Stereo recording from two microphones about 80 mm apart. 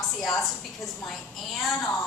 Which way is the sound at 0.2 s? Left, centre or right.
Centre.